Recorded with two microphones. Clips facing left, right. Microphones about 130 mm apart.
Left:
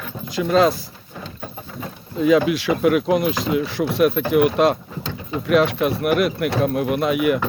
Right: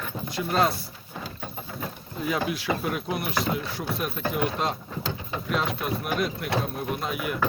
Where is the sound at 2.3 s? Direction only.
90° left.